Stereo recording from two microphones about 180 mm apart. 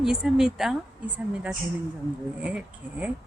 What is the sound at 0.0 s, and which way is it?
A woman's voice, 5° right (ahead or behind).